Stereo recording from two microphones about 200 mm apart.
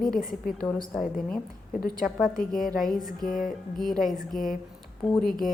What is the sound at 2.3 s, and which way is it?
Speech, 45° left (ahead or behind).